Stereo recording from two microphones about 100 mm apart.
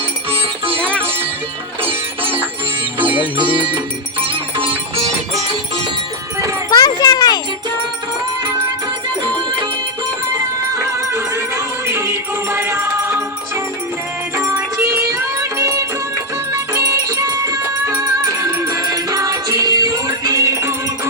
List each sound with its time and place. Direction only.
0.3 s music: 65° right (ahead or behind)
1.8 s music: 70° right (ahead or behind)
3.0 s music: 15° right (ahead or behind)
3.3 s music: 55° right (ahead or behind)
6.7 s a sound: 45° left (ahead or behind)
10.8 s music: 25° right (ahead or behind)
14.3 s music: 30° right (ahead or behind)